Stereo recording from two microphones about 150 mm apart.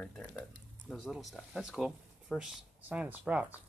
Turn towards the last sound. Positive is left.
turn(degrees=-10)  # may be behind; listen again after turning